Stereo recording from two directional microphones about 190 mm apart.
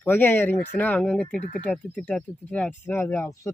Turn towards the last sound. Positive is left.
turn(degrees=15)  # may be behind; listen again after turning